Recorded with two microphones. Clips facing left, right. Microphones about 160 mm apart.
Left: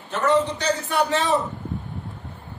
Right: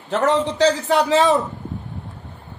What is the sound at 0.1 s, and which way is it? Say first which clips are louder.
A man's voice: right 2 dB; 90° right.